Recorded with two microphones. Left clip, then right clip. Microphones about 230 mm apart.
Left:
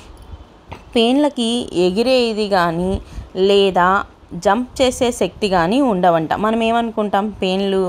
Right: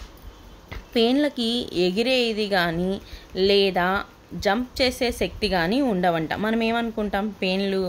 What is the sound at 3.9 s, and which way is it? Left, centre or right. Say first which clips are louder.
Speech: left 8 dB; centre.